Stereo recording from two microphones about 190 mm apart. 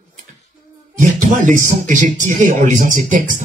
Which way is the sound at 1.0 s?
40° right (ahead or behind).